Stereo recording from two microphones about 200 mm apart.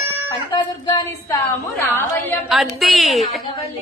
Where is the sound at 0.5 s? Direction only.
20° left (ahead or behind).